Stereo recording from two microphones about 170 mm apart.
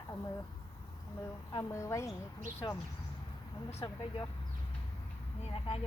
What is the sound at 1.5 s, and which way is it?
Speech, 15° left (ahead or behind).